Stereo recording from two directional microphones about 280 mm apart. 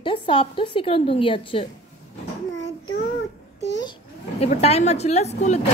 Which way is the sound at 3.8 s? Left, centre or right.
Centre.